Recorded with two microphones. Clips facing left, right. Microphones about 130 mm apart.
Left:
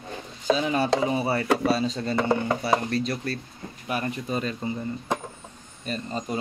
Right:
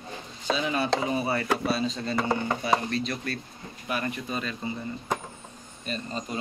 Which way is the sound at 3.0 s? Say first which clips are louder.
Left 3 dB; 35° left (ahead or behind).